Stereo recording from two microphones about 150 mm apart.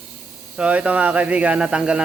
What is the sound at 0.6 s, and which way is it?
Speech, 10° right (ahead or behind).